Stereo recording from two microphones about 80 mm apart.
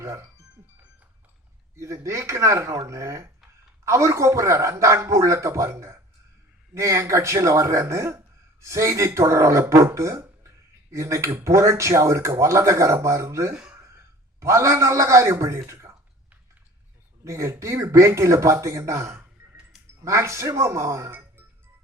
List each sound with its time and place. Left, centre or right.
1.7 s speech: right
13.5 s speech: centre
13.7 s a man's voice: right
17.2 s speech: right